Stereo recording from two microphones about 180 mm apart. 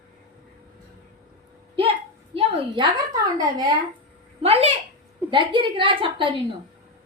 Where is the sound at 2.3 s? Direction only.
25° right (ahead or behind).